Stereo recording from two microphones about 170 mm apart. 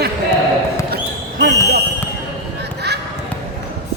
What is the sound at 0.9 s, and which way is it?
Basketball bounce, 75° right (ahead or behind).